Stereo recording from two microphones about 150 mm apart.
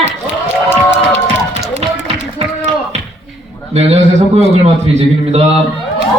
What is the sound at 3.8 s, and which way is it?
A woman's voice, 45° right (ahead or behind).